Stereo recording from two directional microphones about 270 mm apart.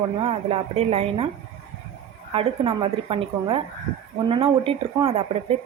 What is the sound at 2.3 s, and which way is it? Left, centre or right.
A woman's voice, centre.